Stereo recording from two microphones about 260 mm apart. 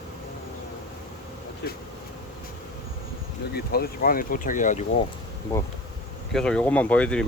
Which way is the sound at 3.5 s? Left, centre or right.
Left.